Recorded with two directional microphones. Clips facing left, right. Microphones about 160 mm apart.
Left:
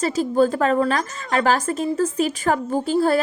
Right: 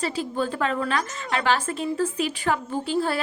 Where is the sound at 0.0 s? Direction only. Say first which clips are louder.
Left 8 dB; 40° left (ahead or behind).